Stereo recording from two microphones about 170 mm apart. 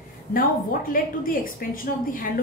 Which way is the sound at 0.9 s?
55° left (ahead or behind).